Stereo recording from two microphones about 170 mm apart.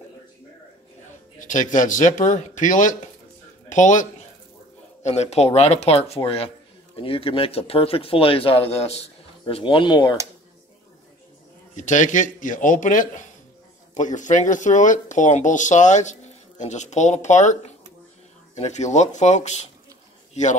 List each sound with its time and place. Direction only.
1.4 s speech: 50° left (ahead or behind); by 10.1 s 30° left (ahead or behind)
11.7 s speech: 45° left (ahead or behind)